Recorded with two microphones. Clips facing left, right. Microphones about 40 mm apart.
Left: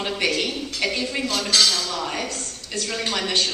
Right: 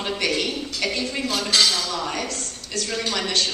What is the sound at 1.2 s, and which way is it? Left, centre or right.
Speech, centre.